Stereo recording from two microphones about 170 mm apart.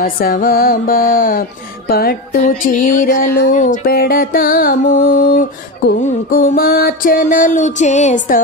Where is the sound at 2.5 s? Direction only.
50° left (ahead or behind).